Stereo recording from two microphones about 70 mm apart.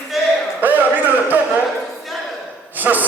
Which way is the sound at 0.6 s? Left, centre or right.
Right.